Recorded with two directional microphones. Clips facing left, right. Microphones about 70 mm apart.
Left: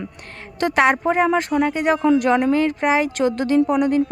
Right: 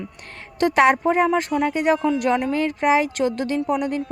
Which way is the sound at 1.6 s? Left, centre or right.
Left.